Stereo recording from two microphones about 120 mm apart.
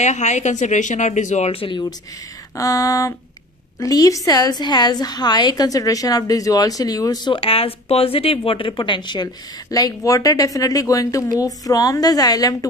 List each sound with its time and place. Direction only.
0.0 s speech: 75° left (ahead or behind)
1.5 s speech: 50° left (ahead or behind)
2.5 s a sound: 25° left (ahead or behind)
3.8 s speech: 30° left (ahead or behind)
7.3 s speech: 50° left (ahead or behind); by 12.5 s 30° left (ahead or behind)